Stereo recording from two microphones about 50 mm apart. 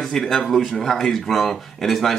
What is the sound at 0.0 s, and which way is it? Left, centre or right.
Speech, centre.